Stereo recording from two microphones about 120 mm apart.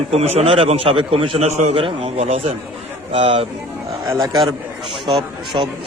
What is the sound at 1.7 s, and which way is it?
A man's voice, 50° right (ahead or behind).